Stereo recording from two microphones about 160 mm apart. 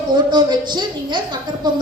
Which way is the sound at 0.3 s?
25° right (ahead or behind).